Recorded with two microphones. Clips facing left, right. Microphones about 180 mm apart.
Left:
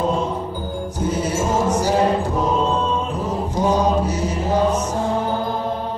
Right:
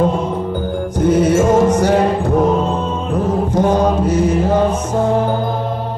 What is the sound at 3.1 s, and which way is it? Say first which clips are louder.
Mantra: right 7 dB; 55° right (ahead or behind).